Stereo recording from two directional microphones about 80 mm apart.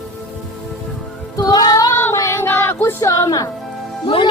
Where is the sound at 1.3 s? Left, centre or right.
Left.